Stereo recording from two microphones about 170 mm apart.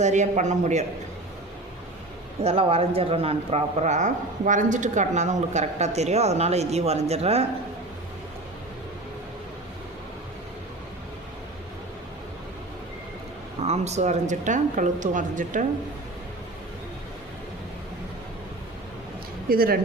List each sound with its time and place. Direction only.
0.0 s speech: 45° right (ahead or behind)
2.4 s speech: 35° right (ahead or behind)
13.6 s speech: 40° right (ahead or behind)
19.5 s speech: 60° right (ahead or behind)